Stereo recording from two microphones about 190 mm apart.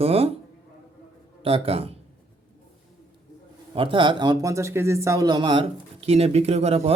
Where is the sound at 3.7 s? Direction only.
25° right (ahead or behind).